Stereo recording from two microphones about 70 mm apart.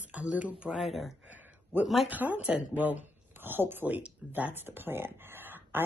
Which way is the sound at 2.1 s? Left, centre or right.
Right.